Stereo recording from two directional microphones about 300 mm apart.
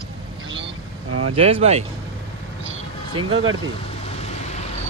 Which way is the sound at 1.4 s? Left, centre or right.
Centre.